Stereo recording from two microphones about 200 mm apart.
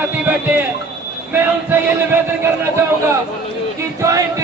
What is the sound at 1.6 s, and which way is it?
Chant, 10° right (ahead or behind).